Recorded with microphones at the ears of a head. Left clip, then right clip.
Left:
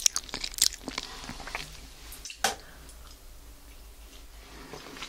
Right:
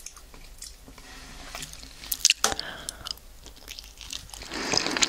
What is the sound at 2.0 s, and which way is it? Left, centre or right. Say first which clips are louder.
Chewing: right 8 dB; right.